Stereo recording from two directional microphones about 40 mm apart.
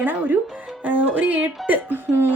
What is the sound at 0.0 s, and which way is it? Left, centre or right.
A woman's voice, right.